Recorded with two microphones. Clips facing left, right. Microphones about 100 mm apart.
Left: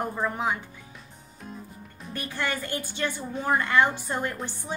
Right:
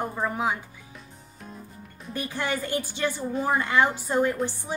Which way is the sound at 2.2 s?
15° right (ahead or behind).